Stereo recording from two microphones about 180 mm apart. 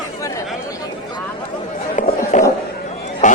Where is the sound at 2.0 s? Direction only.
45° left (ahead or behind).